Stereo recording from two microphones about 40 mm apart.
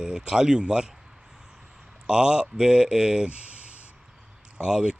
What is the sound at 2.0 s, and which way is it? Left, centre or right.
Speech, right.